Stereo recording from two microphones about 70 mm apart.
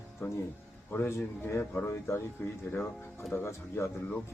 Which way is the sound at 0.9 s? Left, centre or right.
Left.